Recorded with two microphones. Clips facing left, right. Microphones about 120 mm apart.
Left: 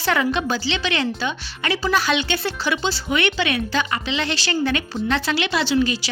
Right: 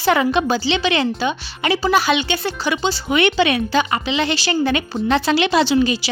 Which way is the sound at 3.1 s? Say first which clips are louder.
Right 6 dB; 20° right (ahead or behind).